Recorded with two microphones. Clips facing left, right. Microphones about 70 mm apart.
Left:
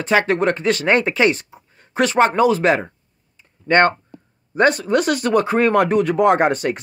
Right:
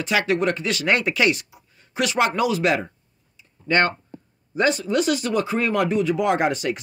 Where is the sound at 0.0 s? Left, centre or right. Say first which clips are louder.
Left 4 dB; left.